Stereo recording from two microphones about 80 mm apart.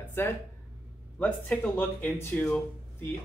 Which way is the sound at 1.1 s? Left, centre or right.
Centre.